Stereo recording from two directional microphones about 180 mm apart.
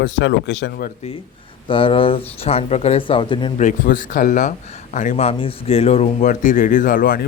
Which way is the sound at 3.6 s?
45° left (ahead or behind).